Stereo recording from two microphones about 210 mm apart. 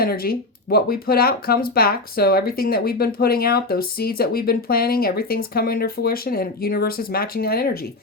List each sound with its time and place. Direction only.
0.0 s speech: 45° left (ahead or behind)